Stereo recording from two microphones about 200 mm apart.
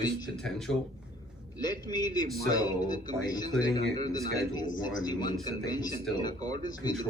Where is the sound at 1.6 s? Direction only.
20° left (ahead or behind).